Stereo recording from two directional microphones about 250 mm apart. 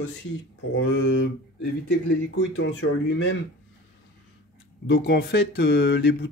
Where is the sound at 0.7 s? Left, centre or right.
Left.